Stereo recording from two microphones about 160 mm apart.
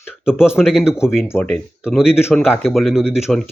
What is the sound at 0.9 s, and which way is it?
Speech, 15° left (ahead or behind).